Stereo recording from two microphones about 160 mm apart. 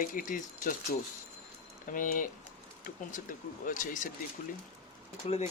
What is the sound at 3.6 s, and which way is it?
Speech, 55° left (ahead or behind).